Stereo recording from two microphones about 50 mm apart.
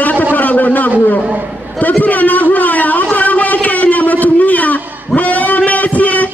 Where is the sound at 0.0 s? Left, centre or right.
Left.